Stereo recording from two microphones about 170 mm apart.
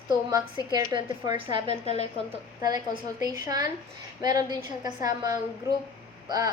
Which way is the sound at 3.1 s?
20° right (ahead or behind).